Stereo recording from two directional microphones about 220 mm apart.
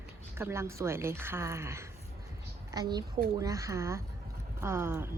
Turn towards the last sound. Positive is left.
turn(degrees=-10)  # may be behind; listen again after turning